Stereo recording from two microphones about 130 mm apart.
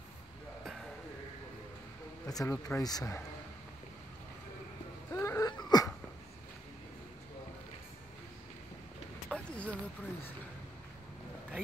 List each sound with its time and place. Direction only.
2.2 s speech: 25° left (ahead or behind)
5.1 s wail: 20° left (ahead or behind)
5.5 s a sound: 35° left (ahead or behind)
9.3 s vehicle: 10° left (ahead or behind)